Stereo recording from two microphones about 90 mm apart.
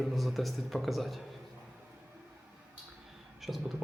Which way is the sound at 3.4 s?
Centre (ahead or behind).